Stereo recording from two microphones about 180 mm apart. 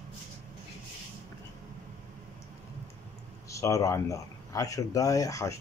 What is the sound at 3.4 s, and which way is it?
Speech, 15° left (ahead or behind).